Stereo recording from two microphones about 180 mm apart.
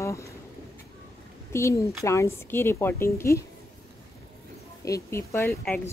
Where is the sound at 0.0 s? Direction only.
15° left (ahead or behind).